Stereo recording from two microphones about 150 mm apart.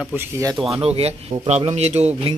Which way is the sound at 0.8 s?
45° right (ahead or behind).